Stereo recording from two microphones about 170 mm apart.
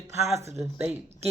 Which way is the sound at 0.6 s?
5° right (ahead or behind).